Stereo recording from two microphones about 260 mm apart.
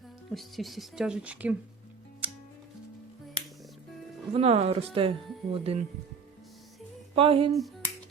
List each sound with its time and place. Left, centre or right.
0.3 s speech: centre
2.2 s music: centre
4.4 s speech: right
7.2 s speech: right